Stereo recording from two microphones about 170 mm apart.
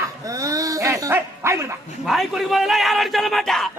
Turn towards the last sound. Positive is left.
turn(degrees=0)  # may be behind; listen again after turning